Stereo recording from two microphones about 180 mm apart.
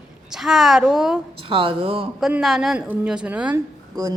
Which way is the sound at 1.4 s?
30° right (ahead or behind).